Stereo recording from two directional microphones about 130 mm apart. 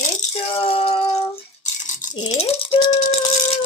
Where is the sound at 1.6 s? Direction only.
75° left (ahead or behind).